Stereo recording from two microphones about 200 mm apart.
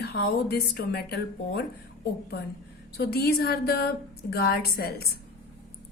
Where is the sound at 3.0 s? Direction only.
50° left (ahead or behind).